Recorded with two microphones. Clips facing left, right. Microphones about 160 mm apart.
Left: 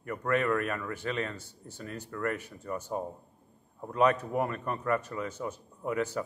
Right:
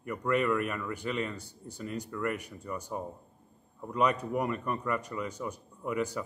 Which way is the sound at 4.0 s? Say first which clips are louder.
Left 2 dB; 10° right (ahead or behind).